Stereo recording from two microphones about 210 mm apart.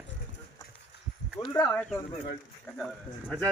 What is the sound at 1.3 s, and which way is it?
Speech, 20° left (ahead or behind).